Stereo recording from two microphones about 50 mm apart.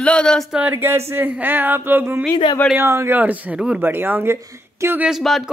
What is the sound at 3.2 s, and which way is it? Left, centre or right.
Speech, right.